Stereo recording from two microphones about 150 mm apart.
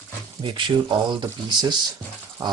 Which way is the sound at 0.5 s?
30° right (ahead or behind).